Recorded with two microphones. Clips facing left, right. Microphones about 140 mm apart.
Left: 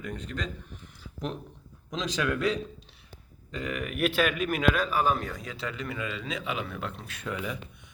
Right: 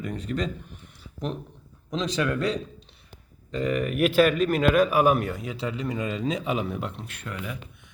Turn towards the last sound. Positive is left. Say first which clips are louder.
# left 1 dB
turn(degrees=0)  # may be behind; listen again after turning